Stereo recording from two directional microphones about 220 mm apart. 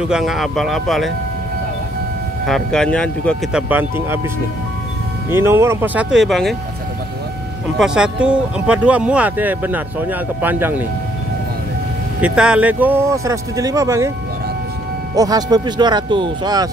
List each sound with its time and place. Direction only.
0.1 s speech: centre (ahead or behind)
2.4 s speech: centre (ahead or behind)
3.6 s speech: 10° right (ahead or behind)
5.3 s speech: 10° right (ahead or behind)
7.8 s speech: 5° right (ahead or behind)
12.2 s speech: 5° right (ahead or behind)
15.1 s speech: 15° right (ahead or behind)